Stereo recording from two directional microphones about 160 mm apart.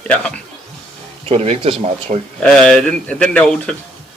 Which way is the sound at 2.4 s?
5° left (ahead or behind).